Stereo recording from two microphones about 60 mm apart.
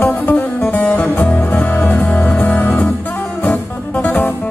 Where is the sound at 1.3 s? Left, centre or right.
Left.